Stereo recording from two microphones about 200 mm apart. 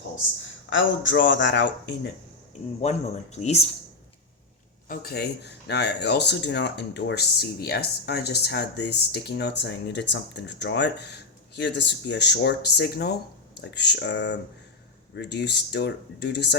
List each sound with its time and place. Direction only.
0.7 s speech: 70° left (ahead or behind)
3.3 s speech: 35° left (ahead or behind)
4.9 s speech: 50° left (ahead or behind)